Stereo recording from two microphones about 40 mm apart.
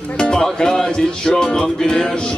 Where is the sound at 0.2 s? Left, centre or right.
Centre.